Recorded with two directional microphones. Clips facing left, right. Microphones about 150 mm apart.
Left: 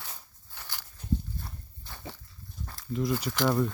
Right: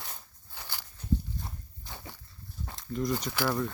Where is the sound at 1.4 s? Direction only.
15° right (ahead or behind).